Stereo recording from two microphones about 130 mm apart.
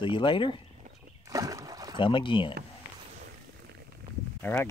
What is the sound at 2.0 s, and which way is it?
Speech, 40° left (ahead or behind).